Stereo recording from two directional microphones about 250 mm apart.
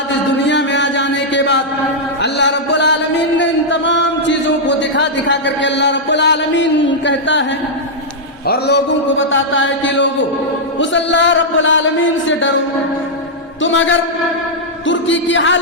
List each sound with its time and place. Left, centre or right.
0.4 s music: left
2.2 s a sound: left
8.4 s a man's voice: left
13.6 s a man's voice: left